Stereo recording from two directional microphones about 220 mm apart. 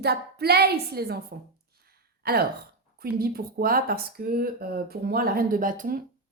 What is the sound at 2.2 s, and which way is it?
Speech, 45° right (ahead or behind).